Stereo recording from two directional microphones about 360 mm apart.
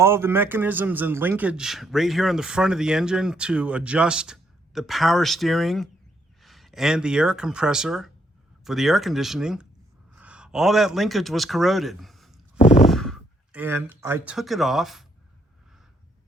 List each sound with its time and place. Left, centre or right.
0.0 s a man's voice: centre
12.5 s a sound: centre
12.8 s speech: centre